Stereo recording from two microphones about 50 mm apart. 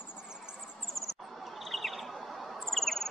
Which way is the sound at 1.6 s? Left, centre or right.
Centre.